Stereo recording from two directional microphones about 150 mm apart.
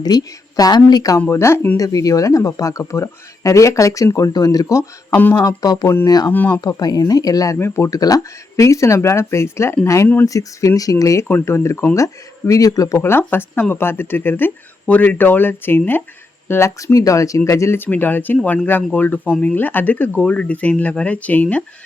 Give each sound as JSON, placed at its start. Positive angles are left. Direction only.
{"t": 0.0, "sound": "speech", "side_deg": 25}
{"t": 6.3, "sound": "speech", "side_deg": 10}
{"t": 6.6, "sound": "speech", "side_deg": 25}